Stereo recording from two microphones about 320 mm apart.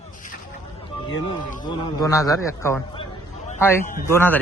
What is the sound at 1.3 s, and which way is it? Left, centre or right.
A man's voice, centre.